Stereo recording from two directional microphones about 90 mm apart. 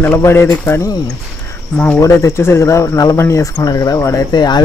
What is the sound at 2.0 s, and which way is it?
Speech, 30° left (ahead or behind).